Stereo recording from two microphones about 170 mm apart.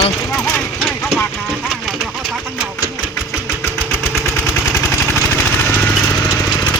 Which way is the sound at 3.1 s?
15° left (ahead or behind).